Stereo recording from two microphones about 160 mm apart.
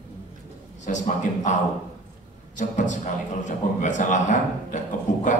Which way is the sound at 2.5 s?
50° left (ahead or behind).